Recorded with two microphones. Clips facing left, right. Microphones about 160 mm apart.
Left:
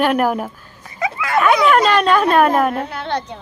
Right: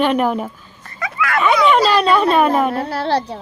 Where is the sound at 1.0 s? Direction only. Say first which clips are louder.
Even; 25° left (ahead or behind).